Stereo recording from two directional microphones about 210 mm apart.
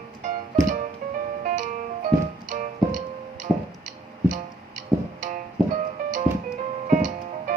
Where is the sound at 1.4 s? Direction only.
35° right (ahead or behind).